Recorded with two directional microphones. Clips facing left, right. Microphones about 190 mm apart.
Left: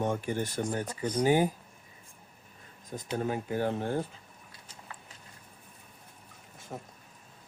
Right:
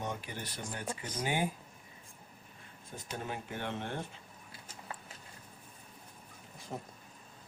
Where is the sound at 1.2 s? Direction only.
40° left (ahead or behind).